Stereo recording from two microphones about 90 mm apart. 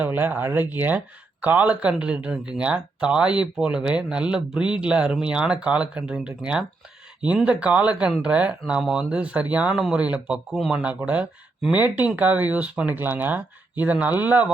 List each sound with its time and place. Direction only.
0.0 s speech: 20° right (ahead or behind)